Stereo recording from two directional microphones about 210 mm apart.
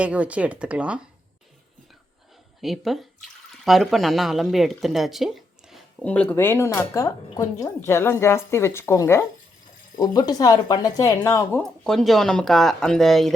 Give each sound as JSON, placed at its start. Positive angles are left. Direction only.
{"t": 0.0, "sound": "speech", "side_deg": -5}
{"t": 2.6, "sound": "speech", "side_deg": 0}
{"t": 11.8, "sound": "speech", "side_deg": 0}